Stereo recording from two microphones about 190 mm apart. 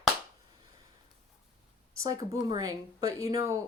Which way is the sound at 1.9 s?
15° right (ahead or behind).